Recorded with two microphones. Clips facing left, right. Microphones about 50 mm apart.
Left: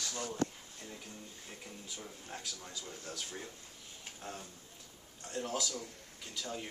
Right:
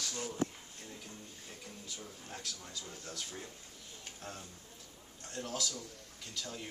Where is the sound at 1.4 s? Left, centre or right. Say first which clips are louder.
Even; centre.